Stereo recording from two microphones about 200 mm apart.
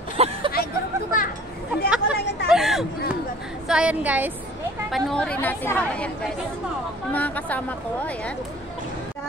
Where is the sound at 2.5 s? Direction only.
Centre (ahead or behind).